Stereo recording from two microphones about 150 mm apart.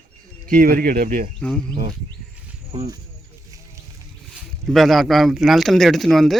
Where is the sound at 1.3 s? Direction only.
5° left (ahead or behind).